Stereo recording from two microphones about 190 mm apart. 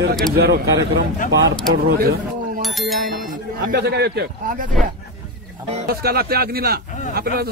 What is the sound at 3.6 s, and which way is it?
A man's voice, 60° right (ahead or behind).